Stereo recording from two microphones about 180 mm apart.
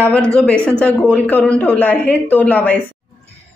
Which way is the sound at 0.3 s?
5° left (ahead or behind).